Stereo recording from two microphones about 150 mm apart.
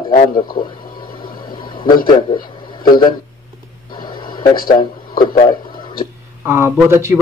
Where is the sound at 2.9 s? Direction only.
30° left (ahead or behind).